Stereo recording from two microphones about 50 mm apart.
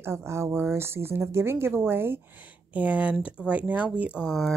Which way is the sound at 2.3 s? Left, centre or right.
Right.